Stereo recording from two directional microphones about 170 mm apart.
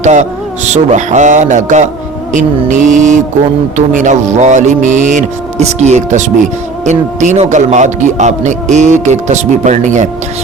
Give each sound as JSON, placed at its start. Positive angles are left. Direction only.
{"t": 0.0, "sound": "a man's voice", "side_deg": -45}